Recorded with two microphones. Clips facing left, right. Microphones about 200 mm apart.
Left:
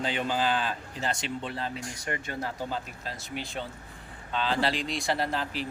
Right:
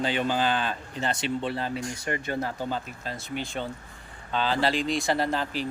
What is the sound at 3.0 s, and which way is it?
Speech, centre (ahead or behind).